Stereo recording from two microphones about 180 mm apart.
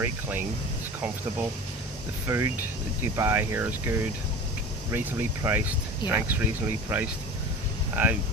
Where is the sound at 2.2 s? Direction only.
15° right (ahead or behind).